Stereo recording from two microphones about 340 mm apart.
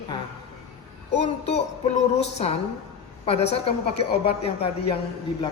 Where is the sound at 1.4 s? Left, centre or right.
Centre.